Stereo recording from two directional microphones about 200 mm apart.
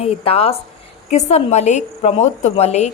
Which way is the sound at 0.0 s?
30° left (ahead or behind).